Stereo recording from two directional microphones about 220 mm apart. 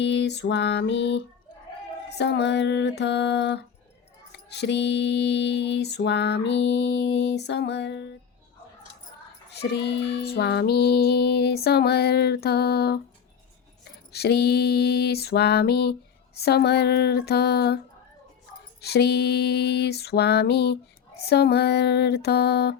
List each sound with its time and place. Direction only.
0.0 s mantra: 55° left (ahead or behind)
9.5 s mantra: 50° left (ahead or behind)
14.1 s mantra: 50° left (ahead or behind)
18.8 s mantra: 50° left (ahead or behind)